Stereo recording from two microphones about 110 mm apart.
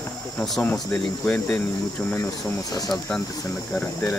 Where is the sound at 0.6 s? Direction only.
15° left (ahead or behind).